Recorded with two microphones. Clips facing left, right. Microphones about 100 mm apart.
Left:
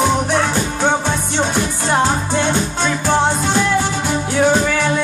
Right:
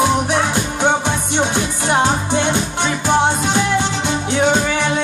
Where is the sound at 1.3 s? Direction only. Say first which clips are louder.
Even; 20° right (ahead or behind).